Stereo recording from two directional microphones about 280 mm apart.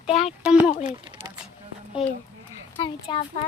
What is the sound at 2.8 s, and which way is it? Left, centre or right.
Speech, centre.